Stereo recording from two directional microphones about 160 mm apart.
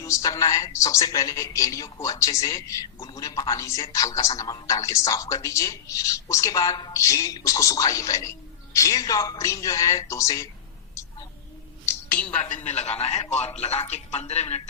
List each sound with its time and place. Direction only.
0.0 s speech: 20° left (ahead or behind)
11.9 s a sound: 10° left (ahead or behind)
12.6 s a man's voice: 45° left (ahead or behind)